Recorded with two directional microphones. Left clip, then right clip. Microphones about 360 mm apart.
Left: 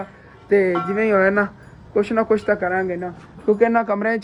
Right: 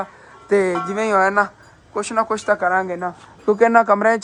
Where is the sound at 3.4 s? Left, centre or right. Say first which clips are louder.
Right 4 dB; right.